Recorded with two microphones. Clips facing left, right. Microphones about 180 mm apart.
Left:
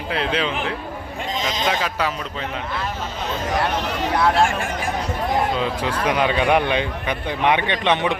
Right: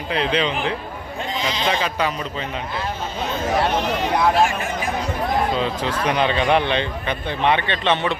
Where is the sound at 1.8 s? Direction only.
5° left (ahead or behind).